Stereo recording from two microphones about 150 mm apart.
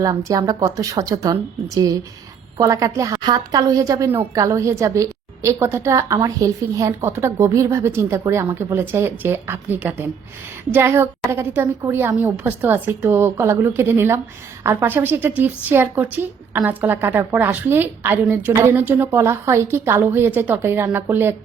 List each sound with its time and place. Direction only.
0.3 s a woman's voice: 25° right (ahead or behind)